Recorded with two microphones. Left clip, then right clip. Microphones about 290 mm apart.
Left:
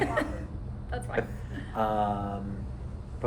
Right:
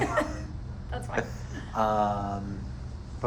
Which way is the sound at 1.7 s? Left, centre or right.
Right.